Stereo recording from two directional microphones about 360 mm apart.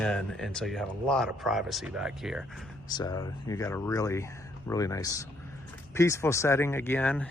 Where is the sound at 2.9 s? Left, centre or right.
Centre.